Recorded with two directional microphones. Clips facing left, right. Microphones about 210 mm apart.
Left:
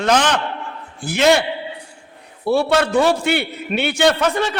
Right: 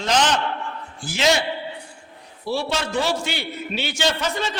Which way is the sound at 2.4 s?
60° left (ahead or behind).